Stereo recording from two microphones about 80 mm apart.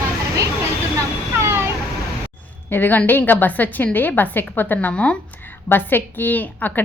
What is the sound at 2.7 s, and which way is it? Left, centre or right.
A woman's voice, left.